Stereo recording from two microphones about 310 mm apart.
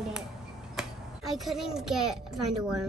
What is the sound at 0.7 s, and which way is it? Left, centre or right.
A child's voice, centre.